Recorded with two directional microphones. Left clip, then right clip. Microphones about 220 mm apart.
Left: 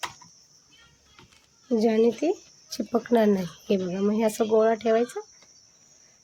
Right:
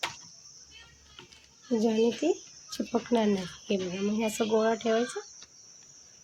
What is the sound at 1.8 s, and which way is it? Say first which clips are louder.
Speech: left 5 dB; 25° left (ahead or behind).